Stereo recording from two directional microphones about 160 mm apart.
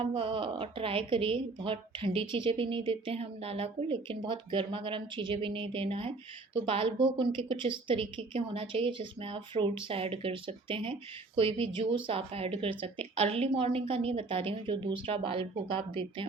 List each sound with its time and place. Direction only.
0.0 s a woman's voice: 30° right (ahead or behind)